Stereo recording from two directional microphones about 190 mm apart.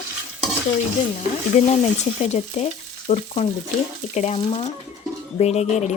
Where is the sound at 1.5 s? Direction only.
35° left (ahead or behind).